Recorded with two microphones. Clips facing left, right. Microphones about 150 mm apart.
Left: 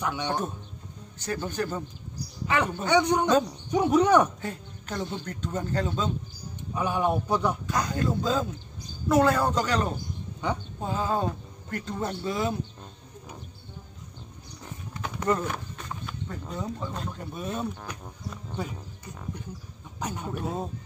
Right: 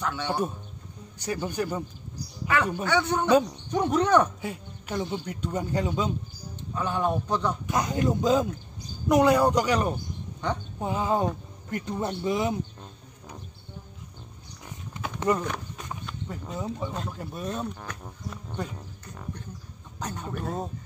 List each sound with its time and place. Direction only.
0.0 s a man's voice: 15° left (ahead or behind)
1.2 s a man's voice: 15° right (ahead or behind)
2.4 s a man's voice: 20° left (ahead or behind)
4.4 s a man's voice: 10° right (ahead or behind)
6.7 s a man's voice: 10° left (ahead or behind)
7.6 s a man's voice: 20° right (ahead or behind)
10.4 s a man's voice: 10° left (ahead or behind)
10.8 s a man's voice: 15° right (ahead or behind)
15.3 s a man's voice: 15° right (ahead or behind)
20.0 s a man's voice: 10° left (ahead or behind)